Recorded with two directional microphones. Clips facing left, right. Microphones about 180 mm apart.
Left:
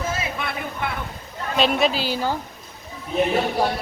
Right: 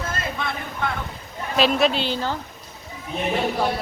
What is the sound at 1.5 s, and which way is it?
Speech, centre (ahead or behind).